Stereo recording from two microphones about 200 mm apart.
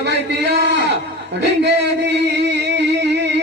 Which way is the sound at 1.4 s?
60° right (ahead or behind).